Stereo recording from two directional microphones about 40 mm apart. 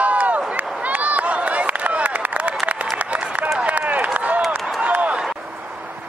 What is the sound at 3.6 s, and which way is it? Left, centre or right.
Run, right.